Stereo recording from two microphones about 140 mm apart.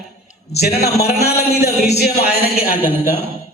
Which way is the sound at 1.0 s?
50° left (ahead or behind).